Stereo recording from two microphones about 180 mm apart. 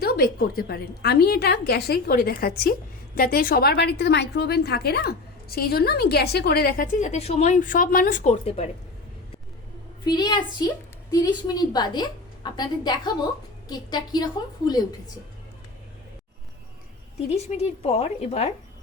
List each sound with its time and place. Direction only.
0.0 s a woman's voice: 55° left (ahead or behind); by 8.7 s 35° left (ahead or behind)
10.1 s a woman's voice: 25° left (ahead or behind)
17.2 s a woman's voice: 35° left (ahead or behind)